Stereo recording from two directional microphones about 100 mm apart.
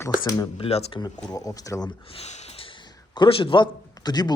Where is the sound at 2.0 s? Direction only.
80° left.